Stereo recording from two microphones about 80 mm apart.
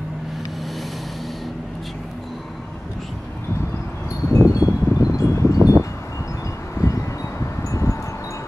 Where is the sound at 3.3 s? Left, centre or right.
Left.